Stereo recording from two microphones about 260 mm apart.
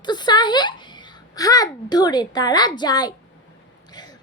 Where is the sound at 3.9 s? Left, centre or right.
Centre.